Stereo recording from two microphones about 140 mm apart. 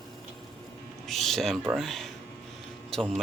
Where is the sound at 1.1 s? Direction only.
Centre (ahead or behind).